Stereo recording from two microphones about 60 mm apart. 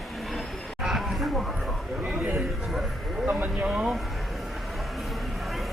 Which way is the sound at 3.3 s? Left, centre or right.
Right.